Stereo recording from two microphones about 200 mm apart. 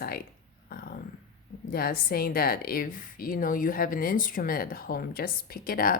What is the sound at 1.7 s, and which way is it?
A woman's voice, 50° left (ahead or behind).